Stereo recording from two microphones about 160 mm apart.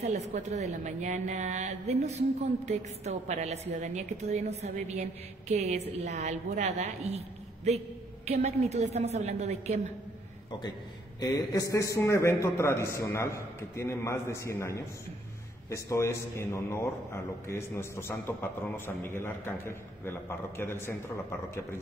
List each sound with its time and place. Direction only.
0.0 s a woman's voice: 45° right (ahead or behind)
11.1 s a man's voice: 25° left (ahead or behind)